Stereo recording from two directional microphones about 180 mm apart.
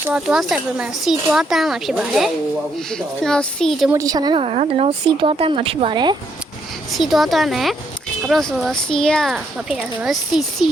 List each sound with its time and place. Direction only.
0.0 s speech: 5° right (ahead or behind)
3.9 s speech: 20° right (ahead or behind)
6.9 s speech: centre (ahead or behind)